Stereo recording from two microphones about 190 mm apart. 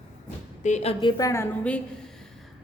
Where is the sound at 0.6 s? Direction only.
35° left (ahead or behind).